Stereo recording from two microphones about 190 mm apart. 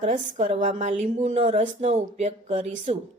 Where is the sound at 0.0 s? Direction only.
35° right (ahead or behind).